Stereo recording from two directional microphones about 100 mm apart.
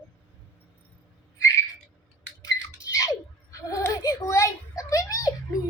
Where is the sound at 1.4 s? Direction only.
30° left (ahead or behind).